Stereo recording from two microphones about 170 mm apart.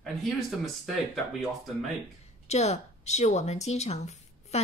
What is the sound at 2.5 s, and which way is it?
A woman's voice, 40° left (ahead or behind).